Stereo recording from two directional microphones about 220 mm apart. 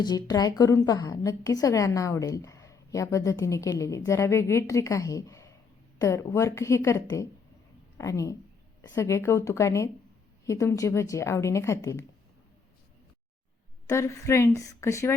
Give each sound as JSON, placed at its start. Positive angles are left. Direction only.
{"t": 0.0, "sound": "a woman's voice", "side_deg": 20}
{"t": 13.8, "sound": "a woman's voice", "side_deg": 15}